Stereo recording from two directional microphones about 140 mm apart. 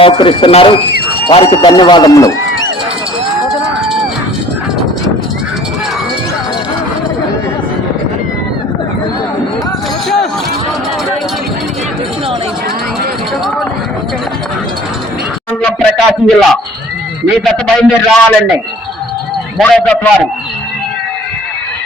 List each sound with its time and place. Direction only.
0.0 s speech: 35° left (ahead or behind)
15.6 s a sound: centre (ahead or behind)
17.4 s a man's voice: centre (ahead or behind)
19.5 s a man's voice: 5° left (ahead or behind)